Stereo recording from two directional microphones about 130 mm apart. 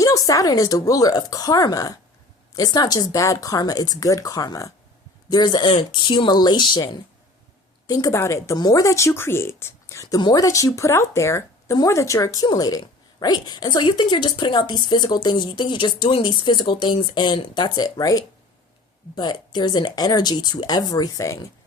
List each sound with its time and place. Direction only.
0.0 s speech: 25° left (ahead or behind)